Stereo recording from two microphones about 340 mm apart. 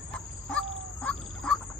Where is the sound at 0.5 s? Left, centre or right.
Centre.